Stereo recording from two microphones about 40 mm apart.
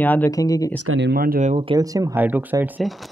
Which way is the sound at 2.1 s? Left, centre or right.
Right.